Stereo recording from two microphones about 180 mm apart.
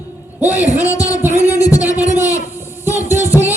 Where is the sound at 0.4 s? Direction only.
10° right (ahead or behind).